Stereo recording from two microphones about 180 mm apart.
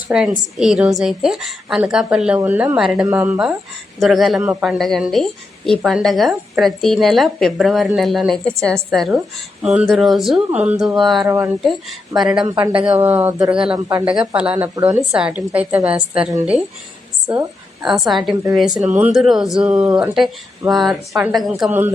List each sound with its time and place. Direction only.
0.1 s a woman's voice: 5° right (ahead or behind)
11.3 s a woman's voice: 15° right (ahead or behind)
11.6 s a woman's voice: centre (ahead or behind)
12.5 s speech: 25° right (ahead or behind)
12.8 s a woman's voice: 10° right (ahead or behind)
13.7 s speech: 20° right (ahead or behind)
14.0 s a woman's voice: 5° right (ahead or behind)
17.8 s a woman's voice: centre (ahead or behind)